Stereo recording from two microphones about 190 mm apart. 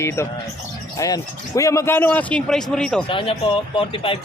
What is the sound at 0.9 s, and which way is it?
Speech, 20° left (ahead or behind).